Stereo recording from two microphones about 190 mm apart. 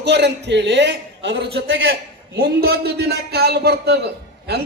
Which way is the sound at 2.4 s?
50° right (ahead or behind).